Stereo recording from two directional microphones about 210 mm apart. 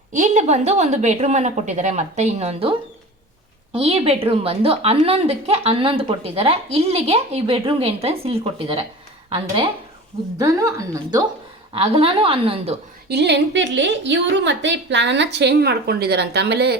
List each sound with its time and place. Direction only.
0.1 s a woman's voice: 35° right (ahead or behind)
10.3 s a woman's voice: 15° right (ahead or behind)
13.1 s a woman's voice: 55° right (ahead or behind)